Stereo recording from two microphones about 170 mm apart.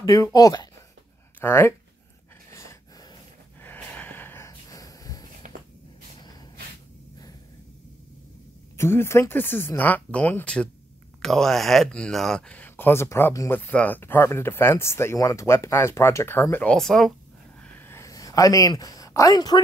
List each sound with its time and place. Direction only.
0.0 s speech: 20° left (ahead or behind)
2.5 s gasp: 15° left (ahead or behind)
3.6 s snort: 10° left (ahead or behind)
5.4 s a sound: 45° right (ahead or behind)
8.7 s speech: 15° left (ahead or behind)
17.6 s a sound: 10° left (ahead or behind)